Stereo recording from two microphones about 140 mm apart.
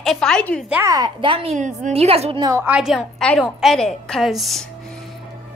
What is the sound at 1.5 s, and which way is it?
Speech, 60° right (ahead or behind).